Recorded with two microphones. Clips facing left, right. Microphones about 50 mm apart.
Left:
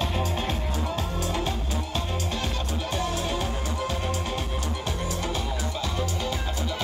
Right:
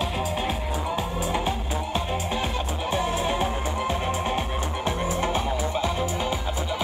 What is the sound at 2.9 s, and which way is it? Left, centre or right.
Music, centre.